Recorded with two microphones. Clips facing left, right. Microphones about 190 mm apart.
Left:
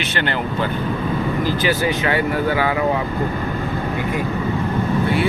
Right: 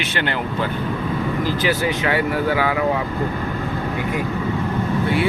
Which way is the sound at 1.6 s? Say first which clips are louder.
Left 1 dB; 5° right (ahead or behind).